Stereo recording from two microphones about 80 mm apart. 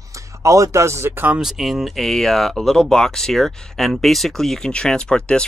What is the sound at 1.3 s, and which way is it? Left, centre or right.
Speech, centre.